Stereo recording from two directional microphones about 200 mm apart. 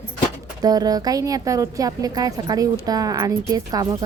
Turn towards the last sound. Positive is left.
turn(degrees=-20)  # may be behind; listen again after turning